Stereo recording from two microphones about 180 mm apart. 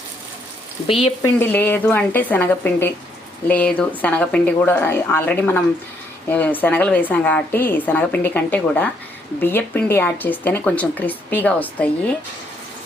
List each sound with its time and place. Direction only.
0.9 s speech: 30° left (ahead or behind)
1.4 s speech: 10° left (ahead or behind)